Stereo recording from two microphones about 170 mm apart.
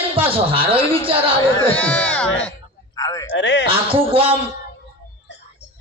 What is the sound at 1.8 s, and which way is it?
Speech, 5° left (ahead or behind).